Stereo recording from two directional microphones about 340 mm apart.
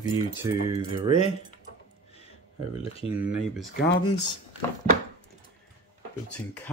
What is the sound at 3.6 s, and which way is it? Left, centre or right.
Speech, left.